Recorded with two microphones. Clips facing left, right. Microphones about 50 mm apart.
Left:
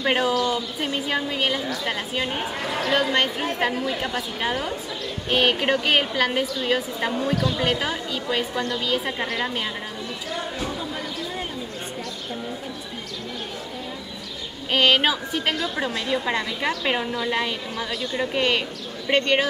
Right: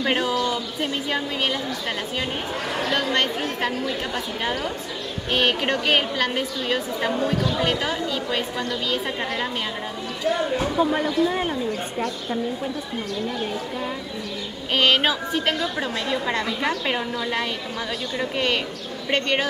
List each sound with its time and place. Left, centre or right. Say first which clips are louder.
0.0 s a woman's voice: left 1 dB; centre
10.6 s speech: right 8 dB; right
14.7 s a woman's voice: even; centre